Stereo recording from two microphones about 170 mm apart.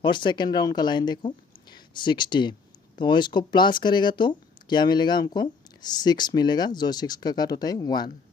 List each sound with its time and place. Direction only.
0.0 s a woman's voice: 30° left (ahead or behind)